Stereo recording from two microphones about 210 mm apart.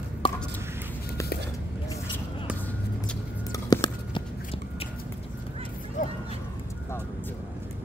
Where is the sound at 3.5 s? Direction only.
20° left (ahead or behind).